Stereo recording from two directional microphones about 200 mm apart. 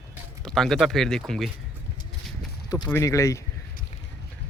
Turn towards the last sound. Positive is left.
turn(degrees=15)  # may be behind; listen again after turning